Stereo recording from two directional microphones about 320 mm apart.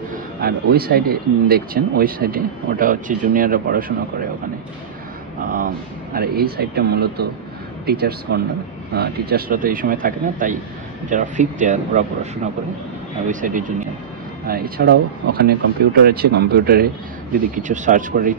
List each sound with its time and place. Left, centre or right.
0.1 s speech: right
5.4 s speech: right
13.3 s speech: right